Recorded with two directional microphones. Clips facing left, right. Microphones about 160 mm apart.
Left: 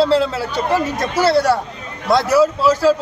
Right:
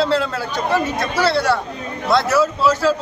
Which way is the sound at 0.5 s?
35° left (ahead or behind).